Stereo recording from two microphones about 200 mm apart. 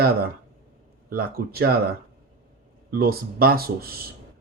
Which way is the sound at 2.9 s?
50° right (ahead or behind).